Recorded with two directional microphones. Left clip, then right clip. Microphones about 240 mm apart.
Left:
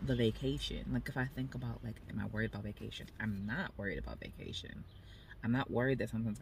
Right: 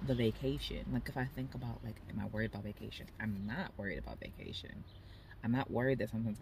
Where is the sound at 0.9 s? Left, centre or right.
Centre.